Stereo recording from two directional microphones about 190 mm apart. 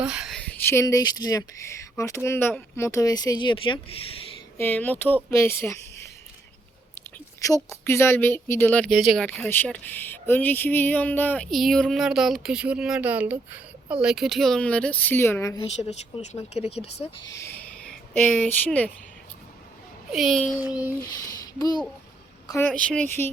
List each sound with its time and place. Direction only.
0.0 s speech: 5° right (ahead or behind); by 4.0 s 25° left (ahead or behind)
4.5 s speech: 10° left (ahead or behind)
7.4 s speech: 15° left (ahead or behind)
15.8 s speech: 35° left (ahead or behind)
17.2 s a sound: 15° left (ahead or behind)
18.2 s speech: 10° left (ahead or behind)
20.1 s speech: centre (ahead or behind)
20.6 s a sound: 10° right (ahead or behind)
21.1 s speech: 20° left (ahead or behind)